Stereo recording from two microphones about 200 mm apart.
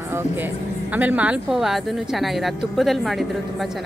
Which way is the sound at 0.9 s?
10° right (ahead or behind).